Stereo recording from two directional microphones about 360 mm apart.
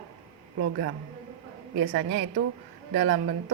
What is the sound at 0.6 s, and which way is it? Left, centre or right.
Speech, right.